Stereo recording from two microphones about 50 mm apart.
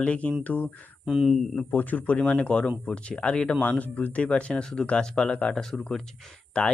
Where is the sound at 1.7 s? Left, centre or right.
Left.